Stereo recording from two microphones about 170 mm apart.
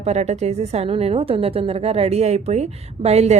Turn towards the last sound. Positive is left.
turn(degrees=-40)  # may be behind; listen again after turning